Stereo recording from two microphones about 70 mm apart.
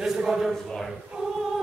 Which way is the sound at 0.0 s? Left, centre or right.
Centre.